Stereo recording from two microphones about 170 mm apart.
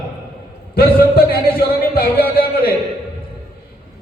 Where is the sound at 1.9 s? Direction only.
60° left (ahead or behind).